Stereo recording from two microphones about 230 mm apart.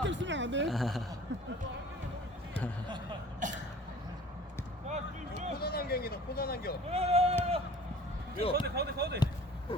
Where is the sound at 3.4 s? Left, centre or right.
Right.